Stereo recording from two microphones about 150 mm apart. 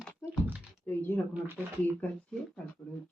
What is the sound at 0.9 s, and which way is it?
Speech, 10° left (ahead or behind).